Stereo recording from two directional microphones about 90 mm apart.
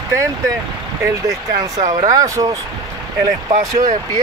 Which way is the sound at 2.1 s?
40° right (ahead or behind).